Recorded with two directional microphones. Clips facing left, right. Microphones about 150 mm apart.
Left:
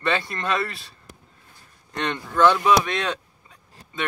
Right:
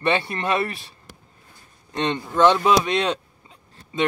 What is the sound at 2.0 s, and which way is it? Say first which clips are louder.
Speech: right 1 dB; 25° right (ahead or behind).